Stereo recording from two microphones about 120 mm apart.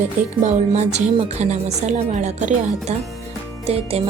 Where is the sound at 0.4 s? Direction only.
70° right (ahead or behind); by 2.6 s 90° right.